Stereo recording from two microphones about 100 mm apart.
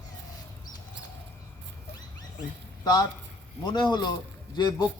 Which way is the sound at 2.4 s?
40° left (ahead or behind).